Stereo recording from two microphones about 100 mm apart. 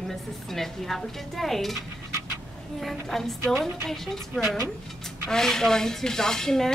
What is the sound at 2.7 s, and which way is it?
A woman's voice, centre (ahead or behind).